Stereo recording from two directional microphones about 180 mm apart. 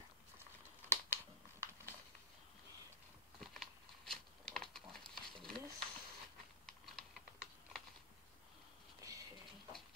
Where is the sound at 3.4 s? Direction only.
Centre (ahead or behind).